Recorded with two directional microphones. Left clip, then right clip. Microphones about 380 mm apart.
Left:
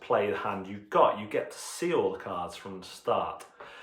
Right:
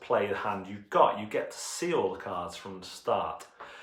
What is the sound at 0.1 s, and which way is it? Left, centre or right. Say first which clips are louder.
Speech: left 1 dB; centre.